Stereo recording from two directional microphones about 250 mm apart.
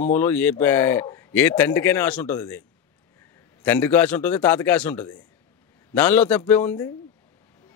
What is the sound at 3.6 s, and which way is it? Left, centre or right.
A man's voice, centre.